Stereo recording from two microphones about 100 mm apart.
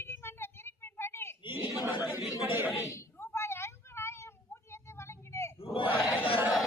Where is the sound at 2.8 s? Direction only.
30° left (ahead or behind).